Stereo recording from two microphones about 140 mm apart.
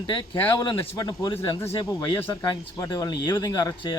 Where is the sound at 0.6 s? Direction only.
30° left (ahead or behind).